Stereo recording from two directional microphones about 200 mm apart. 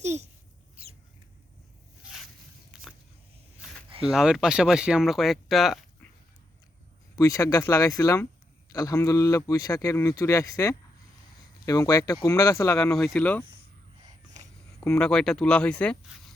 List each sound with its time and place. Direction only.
0.0 s a sound: 35° right (ahead or behind)
0.8 s rodents: 30° right (ahead or behind)
2.7 s biting: 5° right (ahead or behind)
4.0 s speech: 5° right (ahead or behind)
7.2 s speech: 15° left (ahead or behind)
12.8 s speech: centre (ahead or behind)
14.9 s speech: 5° left (ahead or behind)